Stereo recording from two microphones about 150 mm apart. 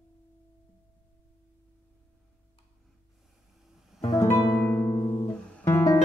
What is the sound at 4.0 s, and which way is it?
Music, 35° left (ahead or behind).